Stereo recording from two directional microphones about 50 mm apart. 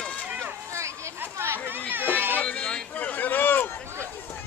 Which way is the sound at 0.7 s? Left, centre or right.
Right.